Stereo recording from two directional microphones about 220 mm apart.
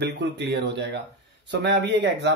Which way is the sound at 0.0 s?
50° right (ahead or behind).